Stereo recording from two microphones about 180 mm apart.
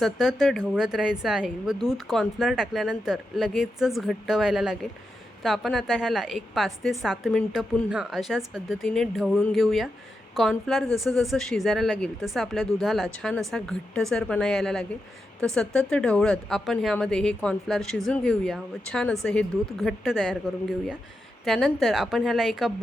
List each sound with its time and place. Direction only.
0.0 s speech: centre (ahead or behind)